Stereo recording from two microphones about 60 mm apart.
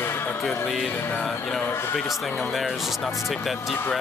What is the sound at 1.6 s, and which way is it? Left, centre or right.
Music, left.